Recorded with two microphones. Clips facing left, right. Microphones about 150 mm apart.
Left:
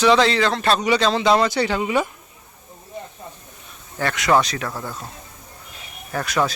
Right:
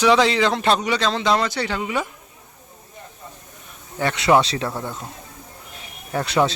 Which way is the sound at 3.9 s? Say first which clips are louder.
Right 1 dB; 25° right (ahead or behind).